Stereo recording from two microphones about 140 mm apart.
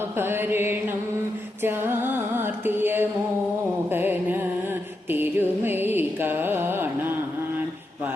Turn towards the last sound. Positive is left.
turn(degrees=-15)  # may be behind; listen again after turning